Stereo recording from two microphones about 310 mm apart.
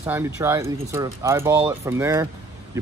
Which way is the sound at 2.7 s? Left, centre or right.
Centre.